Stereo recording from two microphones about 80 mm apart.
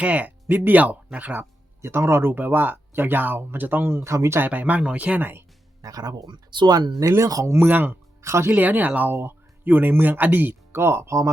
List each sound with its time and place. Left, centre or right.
0.0 s speech: centre
1.8 s speech: right
4.4 s speech: right
5.8 s speech: right
7.2 s speech: right
7.5 s speech: right
8.2 s speech: right
8.4 s speech: right